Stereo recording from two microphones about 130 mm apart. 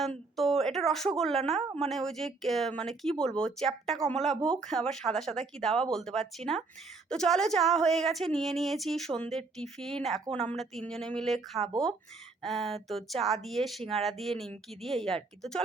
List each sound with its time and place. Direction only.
0.0 s a woman's voice: centre (ahead or behind)
10.3 s speech: 55° right (ahead or behind)
10.6 s a woman's voice: 5° left (ahead or behind)